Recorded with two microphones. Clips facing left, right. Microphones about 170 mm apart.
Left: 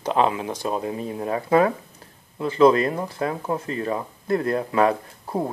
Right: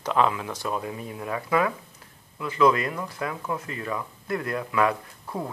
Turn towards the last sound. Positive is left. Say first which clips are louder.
# left 6 dB
turn(degrees=30)  # may be behind; listen again after turning